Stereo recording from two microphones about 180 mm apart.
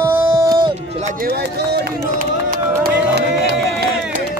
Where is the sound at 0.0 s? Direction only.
20° right (ahead or behind).